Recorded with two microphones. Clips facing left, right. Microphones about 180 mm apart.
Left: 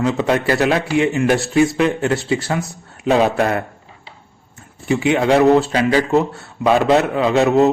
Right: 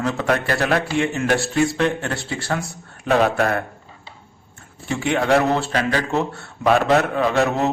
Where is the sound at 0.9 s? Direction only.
5° left (ahead or behind).